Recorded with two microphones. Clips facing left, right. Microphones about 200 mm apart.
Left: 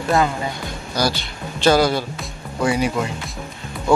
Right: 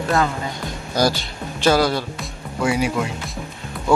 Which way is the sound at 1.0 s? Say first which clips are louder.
Right 2 dB; 45° right (ahead or behind).